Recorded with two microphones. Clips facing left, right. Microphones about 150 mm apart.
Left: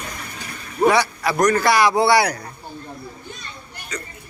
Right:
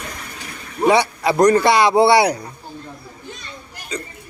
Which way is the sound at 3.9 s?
25° right (ahead or behind).